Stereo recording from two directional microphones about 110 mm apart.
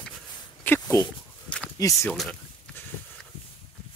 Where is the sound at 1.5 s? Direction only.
10° left (ahead or behind).